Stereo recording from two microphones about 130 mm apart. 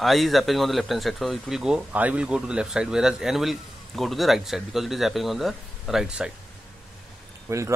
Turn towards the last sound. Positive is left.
turn(degrees=-25)  # may be behind; listen again after turning